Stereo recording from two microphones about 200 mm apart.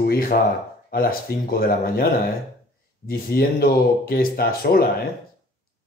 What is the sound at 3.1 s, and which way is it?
Speech, 50° left (ahead or behind).